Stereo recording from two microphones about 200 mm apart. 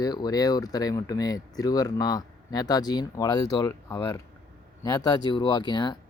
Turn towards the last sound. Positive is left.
turn(degrees=20)  # may be behind; listen again after turning